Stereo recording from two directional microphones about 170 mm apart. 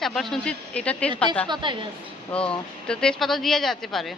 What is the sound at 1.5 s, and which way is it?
Speech, 30° right (ahead or behind).